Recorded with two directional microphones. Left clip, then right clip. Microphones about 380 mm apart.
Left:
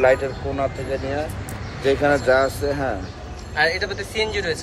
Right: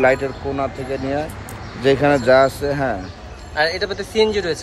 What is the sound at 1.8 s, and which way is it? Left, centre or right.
Speech, right.